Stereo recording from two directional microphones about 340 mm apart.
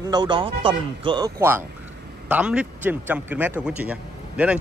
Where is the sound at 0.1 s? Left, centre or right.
Centre.